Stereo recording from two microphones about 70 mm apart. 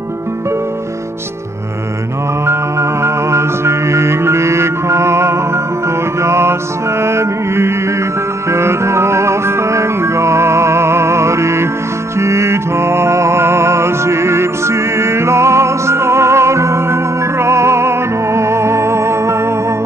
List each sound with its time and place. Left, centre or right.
2.4 s music: right